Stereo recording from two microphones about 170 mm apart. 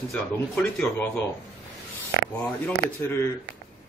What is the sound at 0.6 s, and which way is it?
Speech, 10° left (ahead or behind).